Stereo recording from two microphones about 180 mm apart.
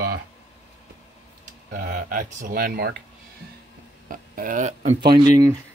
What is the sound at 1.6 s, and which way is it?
Speech, 45° right (ahead or behind).